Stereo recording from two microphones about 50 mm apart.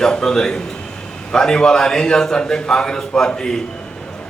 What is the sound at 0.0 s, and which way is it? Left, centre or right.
A man's voice, centre.